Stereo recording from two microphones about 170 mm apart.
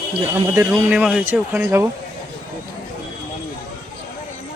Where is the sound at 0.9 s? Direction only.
5° right (ahead or behind).